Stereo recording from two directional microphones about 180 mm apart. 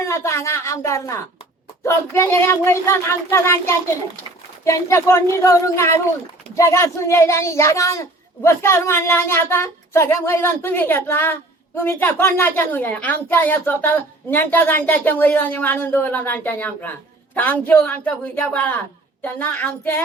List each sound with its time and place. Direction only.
0.0 s a woman's voice: 15° left (ahead or behind)